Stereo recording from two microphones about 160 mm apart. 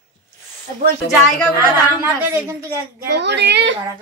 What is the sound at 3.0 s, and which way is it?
Speech, 90° right.